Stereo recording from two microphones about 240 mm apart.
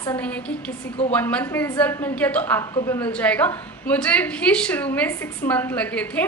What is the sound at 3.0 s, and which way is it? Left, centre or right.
A woman's voice, centre.